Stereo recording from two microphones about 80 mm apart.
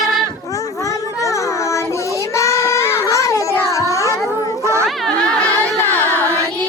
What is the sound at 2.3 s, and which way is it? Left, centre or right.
Child singing, left.